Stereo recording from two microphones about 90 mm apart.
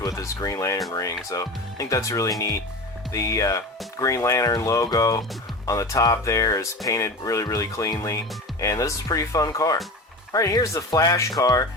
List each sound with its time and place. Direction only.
0.0 s speech: 35° left (ahead or behind)